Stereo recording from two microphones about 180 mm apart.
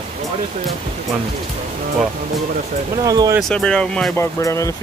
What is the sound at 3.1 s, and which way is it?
Speech, 20° right (ahead or behind).